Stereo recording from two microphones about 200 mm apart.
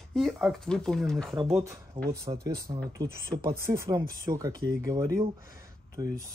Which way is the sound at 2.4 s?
20° right (ahead or behind).